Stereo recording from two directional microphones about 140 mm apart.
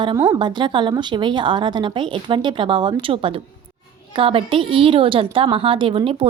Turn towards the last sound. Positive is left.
turn(degrees=-40)  # may be behind; listen again after turning